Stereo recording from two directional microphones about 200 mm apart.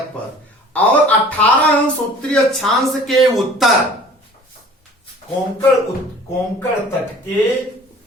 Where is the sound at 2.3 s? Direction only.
Centre (ahead or behind).